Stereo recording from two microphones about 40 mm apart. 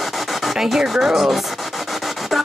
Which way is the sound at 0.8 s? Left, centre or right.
Centre.